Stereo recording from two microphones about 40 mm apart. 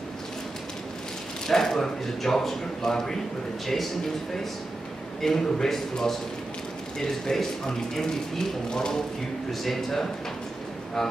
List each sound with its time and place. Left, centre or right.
1.5 s a man's voice: centre
5.2 s a man's voice: centre
9.5 s speech: centre